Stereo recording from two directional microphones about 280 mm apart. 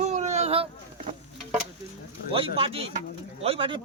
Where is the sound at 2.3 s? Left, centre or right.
Centre.